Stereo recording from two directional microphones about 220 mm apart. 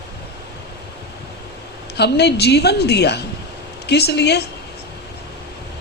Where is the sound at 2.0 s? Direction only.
50° left (ahead or behind).